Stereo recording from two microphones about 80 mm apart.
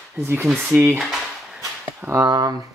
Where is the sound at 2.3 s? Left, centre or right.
Right.